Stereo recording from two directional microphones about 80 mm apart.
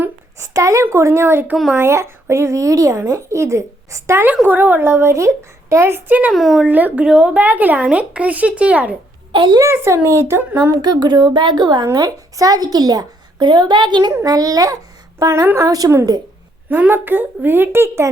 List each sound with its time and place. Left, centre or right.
0.3 s speech: right
4.4 s speech: right
6.1 s a woman's voice: centre
6.3 s speech: centre
6.7 s a woman's voice: right
7.0 s speech: centre
9.3 s a child's voice: right
9.6 s speech: right
10.8 s a woman's voice: right
11.9 s a woman's voice: right
14.1 s a child's voice: right
16.6 s a woman's voice: right